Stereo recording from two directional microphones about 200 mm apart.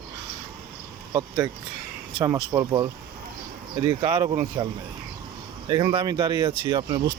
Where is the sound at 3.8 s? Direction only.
25° right (ahead or behind).